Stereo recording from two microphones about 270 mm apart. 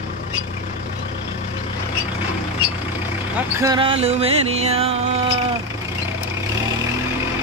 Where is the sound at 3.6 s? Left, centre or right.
Centre.